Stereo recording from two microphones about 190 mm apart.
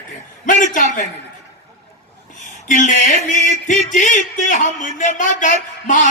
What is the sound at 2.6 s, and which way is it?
A man's voice, 40° left (ahead or behind).